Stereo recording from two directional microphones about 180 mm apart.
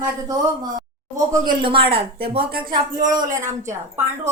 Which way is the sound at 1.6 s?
30° right (ahead or behind).